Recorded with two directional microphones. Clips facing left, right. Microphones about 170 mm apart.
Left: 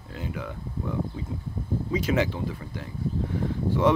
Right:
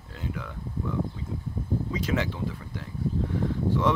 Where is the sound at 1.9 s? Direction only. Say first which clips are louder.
Left 5 dB; 10° left (ahead or behind).